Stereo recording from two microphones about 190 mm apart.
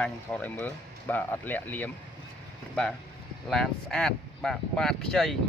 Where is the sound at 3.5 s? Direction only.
Centre (ahead or behind).